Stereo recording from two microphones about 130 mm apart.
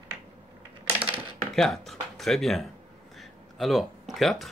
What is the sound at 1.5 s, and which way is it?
Speech, centre (ahead or behind).